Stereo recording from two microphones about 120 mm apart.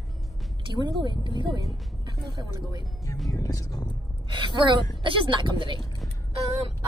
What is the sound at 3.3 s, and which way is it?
Speech, 30° left (ahead or behind).